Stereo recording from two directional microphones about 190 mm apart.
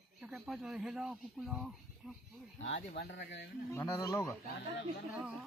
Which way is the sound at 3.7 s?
15° left (ahead or behind).